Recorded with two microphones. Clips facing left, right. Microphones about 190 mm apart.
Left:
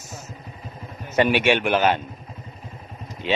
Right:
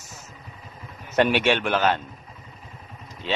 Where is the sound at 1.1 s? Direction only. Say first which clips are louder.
Left 1 dB; 5° left (ahead or behind).